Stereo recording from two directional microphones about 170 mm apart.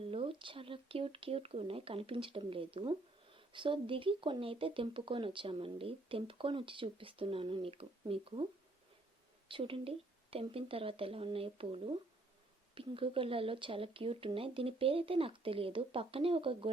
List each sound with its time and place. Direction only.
0.0 s speech: 30° right (ahead or behind)
9.5 s speech: 30° right (ahead or behind)